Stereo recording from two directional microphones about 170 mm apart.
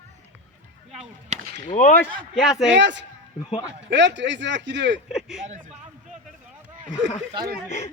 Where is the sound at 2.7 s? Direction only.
90° right.